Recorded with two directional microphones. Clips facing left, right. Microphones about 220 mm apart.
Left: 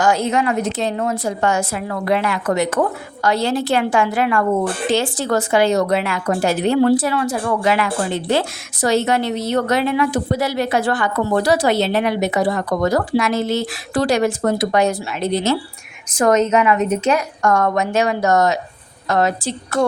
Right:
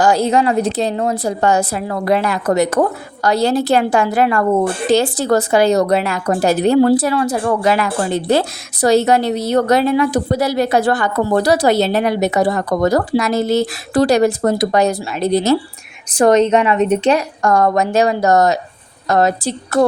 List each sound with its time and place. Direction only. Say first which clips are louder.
0.0 s speech: right 4 dB; 35° right (ahead or behind)